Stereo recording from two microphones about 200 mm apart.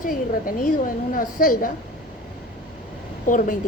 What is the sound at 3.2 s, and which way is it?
Speech, 40° left (ahead or behind).